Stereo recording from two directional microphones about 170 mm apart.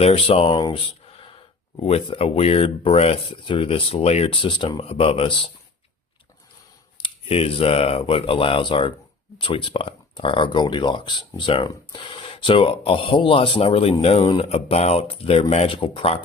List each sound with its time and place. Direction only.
0.0 s speech: 35° left (ahead or behind)
7.0 s speech: 35° left (ahead or behind)